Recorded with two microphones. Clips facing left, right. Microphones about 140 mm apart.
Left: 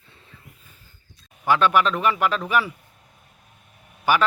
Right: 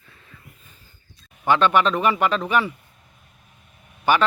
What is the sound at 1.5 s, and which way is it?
Speech, 5° left (ahead or behind).